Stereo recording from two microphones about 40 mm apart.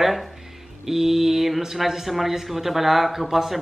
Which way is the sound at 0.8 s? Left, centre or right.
Centre.